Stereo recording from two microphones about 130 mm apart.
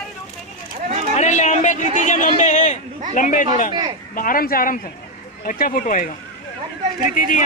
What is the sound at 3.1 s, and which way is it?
Speech, 90° left.